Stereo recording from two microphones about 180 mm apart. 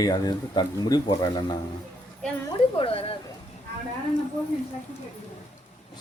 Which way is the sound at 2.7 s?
30° left (ahead or behind).